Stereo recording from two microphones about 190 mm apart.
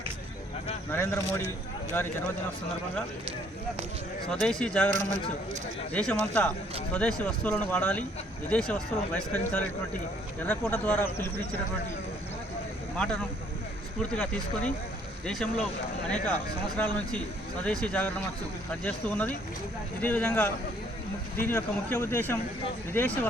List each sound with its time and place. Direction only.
0.9 s speech: 15° left (ahead or behind)
4.3 s speech: 5° left (ahead or behind)
4.9 s speech: 40° right (ahead or behind)
5.9 s speech: 5° left (ahead or behind)
13.0 s speech: 5° left (ahead or behind)